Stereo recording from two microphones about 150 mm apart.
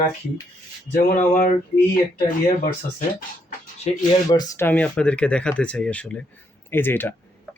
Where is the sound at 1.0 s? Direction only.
60° left (ahead or behind).